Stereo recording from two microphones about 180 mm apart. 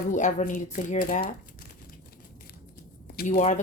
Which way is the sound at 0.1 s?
45° left (ahead or behind).